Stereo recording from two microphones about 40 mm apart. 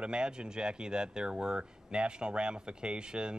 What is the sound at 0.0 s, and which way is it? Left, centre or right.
Speech, right.